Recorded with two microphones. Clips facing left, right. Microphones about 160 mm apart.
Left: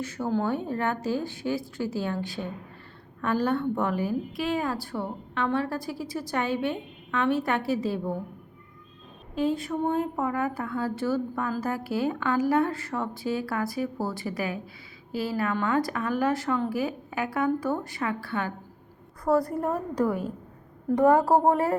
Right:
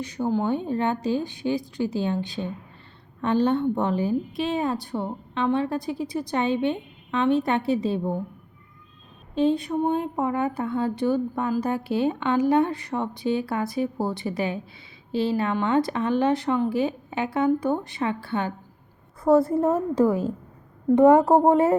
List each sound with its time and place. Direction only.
0.0 s a woman's voice: 15° right (ahead or behind)
9.3 s a woman's voice: 25° right (ahead or behind)